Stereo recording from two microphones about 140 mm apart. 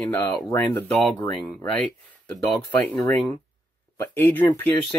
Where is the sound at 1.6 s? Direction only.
10° left (ahead or behind).